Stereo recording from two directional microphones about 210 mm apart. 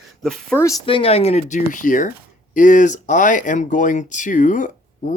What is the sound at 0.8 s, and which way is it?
Speech, 25° left (ahead or behind).